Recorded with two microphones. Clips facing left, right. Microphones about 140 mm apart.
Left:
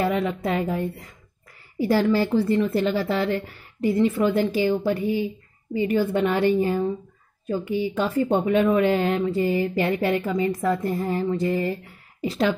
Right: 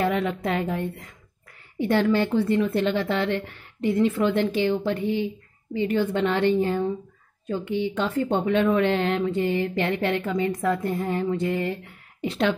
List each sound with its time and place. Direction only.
0.0 s a woman's voice: centre (ahead or behind)